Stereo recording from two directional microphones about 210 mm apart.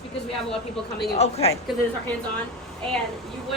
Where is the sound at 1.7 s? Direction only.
Centre (ahead or behind).